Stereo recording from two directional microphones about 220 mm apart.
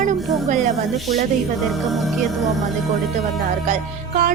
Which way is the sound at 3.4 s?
35° right (ahead or behind).